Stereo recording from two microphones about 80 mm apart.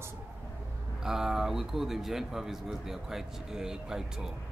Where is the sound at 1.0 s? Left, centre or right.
Centre.